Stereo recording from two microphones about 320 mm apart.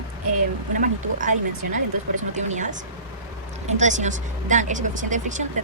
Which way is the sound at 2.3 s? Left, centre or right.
Right.